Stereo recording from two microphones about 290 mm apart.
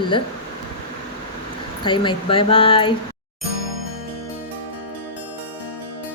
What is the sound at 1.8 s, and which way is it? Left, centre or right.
Speech, centre.